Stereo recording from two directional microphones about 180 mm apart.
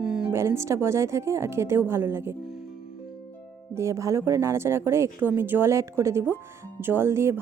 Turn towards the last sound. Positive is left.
turn(degrees=-15)  # may be behind; listen again after turning